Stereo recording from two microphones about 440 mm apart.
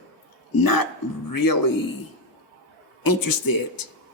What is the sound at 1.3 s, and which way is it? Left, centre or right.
Speech, left.